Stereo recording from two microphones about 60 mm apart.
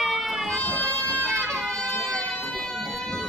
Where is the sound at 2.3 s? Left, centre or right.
Centre.